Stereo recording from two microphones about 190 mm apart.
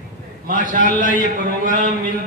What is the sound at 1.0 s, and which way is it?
Speech, 45° right (ahead or behind).